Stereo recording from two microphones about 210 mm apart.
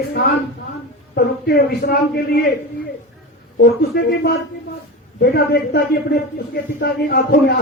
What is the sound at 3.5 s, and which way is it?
Speech, 50° left (ahead or behind).